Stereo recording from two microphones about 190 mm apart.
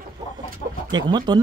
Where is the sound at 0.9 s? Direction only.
25° right (ahead or behind).